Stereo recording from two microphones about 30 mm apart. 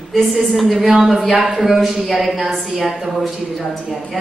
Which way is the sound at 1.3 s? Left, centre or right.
Right.